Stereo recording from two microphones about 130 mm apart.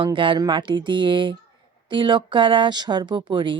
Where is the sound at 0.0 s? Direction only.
40° right (ahead or behind).